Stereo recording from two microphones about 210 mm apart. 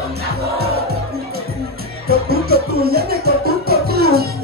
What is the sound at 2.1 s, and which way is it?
Music, 45° right (ahead or behind).